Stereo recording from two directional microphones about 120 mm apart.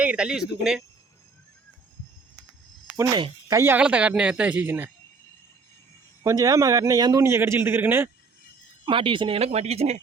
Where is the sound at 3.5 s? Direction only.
25° right (ahead or behind).